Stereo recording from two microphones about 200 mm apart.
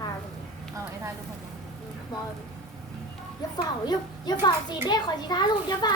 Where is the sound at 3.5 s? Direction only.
20° left (ahead or behind).